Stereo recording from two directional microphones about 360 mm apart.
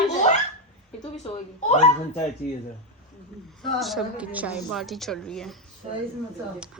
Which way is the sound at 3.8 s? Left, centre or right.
Centre.